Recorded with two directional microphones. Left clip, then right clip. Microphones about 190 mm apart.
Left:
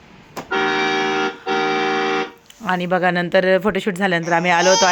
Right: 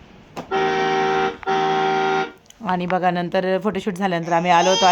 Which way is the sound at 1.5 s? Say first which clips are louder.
Even; 15° left (ahead or behind).